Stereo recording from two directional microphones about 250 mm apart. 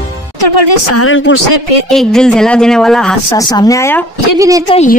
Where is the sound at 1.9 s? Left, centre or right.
Centre.